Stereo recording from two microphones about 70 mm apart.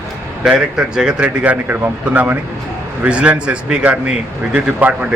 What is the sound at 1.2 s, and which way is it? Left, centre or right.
A man's voice, right.